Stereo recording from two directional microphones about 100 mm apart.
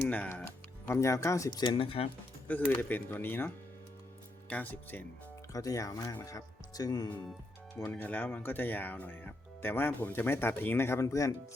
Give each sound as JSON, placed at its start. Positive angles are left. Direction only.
{"t": 0.1, "sound": "speech", "side_deg": 15}
{"t": 1.5, "sound": "speech", "side_deg": 50}
{"t": 2.5, "sound": "speech", "side_deg": 20}
{"t": 5.5, "sound": "speech", "side_deg": 35}
{"t": 7.9, "sound": "speech", "side_deg": 15}